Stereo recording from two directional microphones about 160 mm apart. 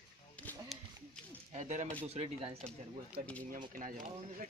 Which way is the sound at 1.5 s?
45° right (ahead or behind).